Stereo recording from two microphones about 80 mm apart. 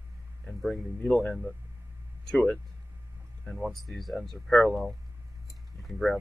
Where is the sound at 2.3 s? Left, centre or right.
Centre.